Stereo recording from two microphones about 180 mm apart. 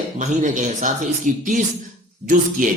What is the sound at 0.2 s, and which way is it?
Speech, 45° right (ahead or behind).